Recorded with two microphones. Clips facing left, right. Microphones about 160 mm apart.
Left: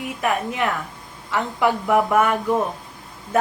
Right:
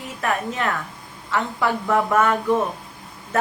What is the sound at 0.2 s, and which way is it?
Speech, 15° left (ahead or behind).